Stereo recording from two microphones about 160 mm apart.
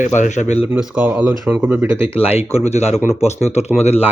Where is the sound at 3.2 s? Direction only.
45° left (ahead or behind).